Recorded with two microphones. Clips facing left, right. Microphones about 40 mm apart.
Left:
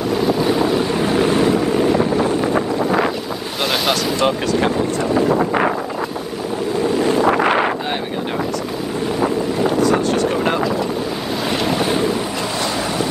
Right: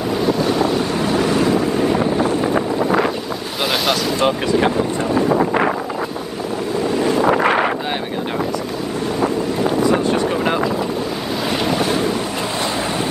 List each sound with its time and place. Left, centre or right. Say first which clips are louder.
0.4 s boat: left 1 dB; centre
2.4 s boat: even; centre
9.2 s wind noise: left 1 dB; centre
9.8 s vehicle: right 1 dB; centre
11.6 s vehicle: even; centre